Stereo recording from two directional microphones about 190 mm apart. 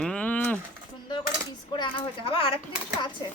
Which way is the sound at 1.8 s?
30° left (ahead or behind).